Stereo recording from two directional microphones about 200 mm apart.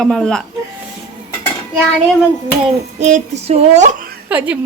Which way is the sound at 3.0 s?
35° right (ahead or behind).